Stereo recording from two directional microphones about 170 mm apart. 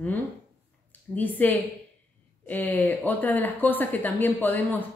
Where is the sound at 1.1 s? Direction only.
10° left (ahead or behind).